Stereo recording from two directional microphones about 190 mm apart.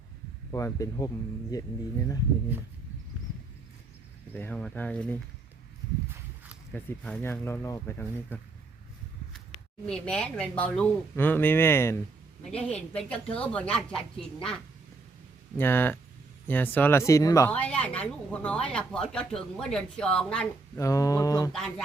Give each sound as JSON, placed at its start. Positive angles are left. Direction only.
{"t": 0.5, "sound": "speech", "side_deg": 15}
{"t": 4.4, "sound": "speech", "side_deg": 5}
{"t": 6.7, "sound": "speech", "side_deg": 5}
{"t": 9.8, "sound": "a woman's voice", "side_deg": 5}
{"t": 15.5, "sound": "speech", "side_deg": 10}
{"t": 20.7, "sound": "speech", "side_deg": 15}
{"t": 21.5, "sound": "a woman's voice", "side_deg": 5}